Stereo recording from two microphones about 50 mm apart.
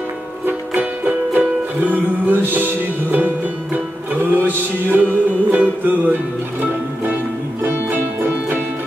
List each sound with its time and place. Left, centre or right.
0.5 s music: right
7.6 s music: right